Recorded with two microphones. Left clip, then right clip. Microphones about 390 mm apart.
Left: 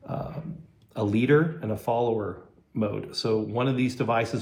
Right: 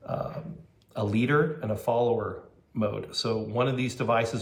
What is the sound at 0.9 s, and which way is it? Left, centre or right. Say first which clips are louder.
Speech: left 3 dB; centre.